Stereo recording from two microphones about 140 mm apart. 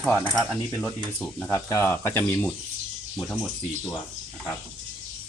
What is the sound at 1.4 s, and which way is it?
Speech, 20° left (ahead or behind).